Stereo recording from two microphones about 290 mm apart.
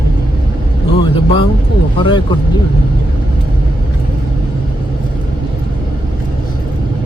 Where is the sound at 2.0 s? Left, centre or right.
Centre.